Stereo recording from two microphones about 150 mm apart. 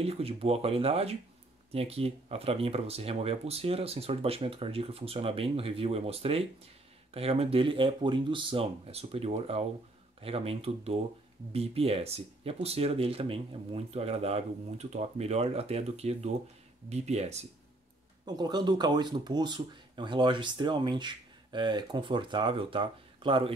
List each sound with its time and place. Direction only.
0.0 s speech: 40° right (ahead or behind)
18.2 s speech: 30° right (ahead or behind)